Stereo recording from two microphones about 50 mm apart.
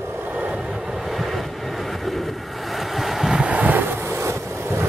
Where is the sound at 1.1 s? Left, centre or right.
Centre.